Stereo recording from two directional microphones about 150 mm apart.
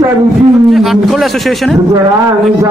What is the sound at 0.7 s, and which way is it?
Speech, centre (ahead or behind).